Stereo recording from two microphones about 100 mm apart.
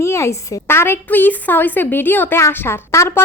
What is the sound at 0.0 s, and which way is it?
A woman's voice, 30° left (ahead or behind).